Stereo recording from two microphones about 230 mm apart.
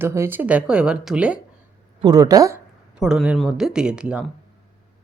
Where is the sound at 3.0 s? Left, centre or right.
Centre.